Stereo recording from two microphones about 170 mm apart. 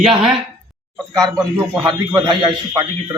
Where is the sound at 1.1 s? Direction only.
20° right (ahead or behind).